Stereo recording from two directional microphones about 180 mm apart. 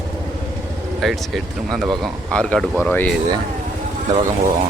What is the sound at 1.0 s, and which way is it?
Speech, centre (ahead or behind).